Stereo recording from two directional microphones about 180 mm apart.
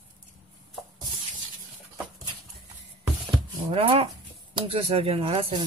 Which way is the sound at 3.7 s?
30° right (ahead or behind).